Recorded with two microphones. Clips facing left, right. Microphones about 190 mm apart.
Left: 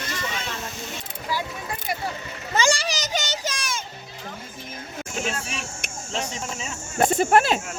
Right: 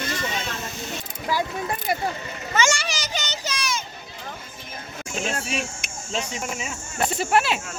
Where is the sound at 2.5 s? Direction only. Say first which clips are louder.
Left 1 dB; 35° left (ahead or behind); by 3.8 s 50° left (ahead or behind).